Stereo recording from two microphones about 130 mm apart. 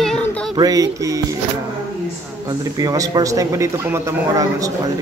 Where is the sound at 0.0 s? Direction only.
5° left (ahead or behind).